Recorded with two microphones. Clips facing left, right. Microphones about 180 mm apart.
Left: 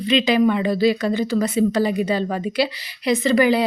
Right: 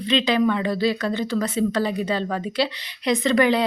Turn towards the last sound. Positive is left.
turn(degrees=5)  # may be behind; listen again after turning